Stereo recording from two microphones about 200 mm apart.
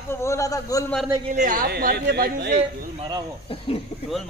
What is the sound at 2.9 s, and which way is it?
Cricket, 25° right (ahead or behind).